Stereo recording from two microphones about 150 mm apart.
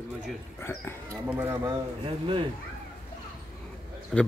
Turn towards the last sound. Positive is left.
turn(degrees=0)  # may be behind; listen again after turning